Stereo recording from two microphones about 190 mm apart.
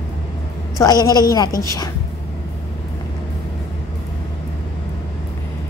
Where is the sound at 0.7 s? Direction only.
20° left (ahead or behind).